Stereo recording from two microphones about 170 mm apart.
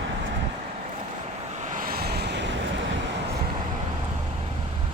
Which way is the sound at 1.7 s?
60° right (ahead or behind).